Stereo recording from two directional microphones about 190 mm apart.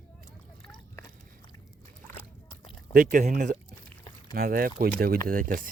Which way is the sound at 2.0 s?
10° left (ahead or behind).